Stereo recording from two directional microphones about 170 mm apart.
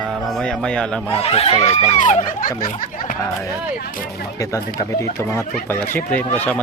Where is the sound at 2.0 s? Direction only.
45° left (ahead or behind).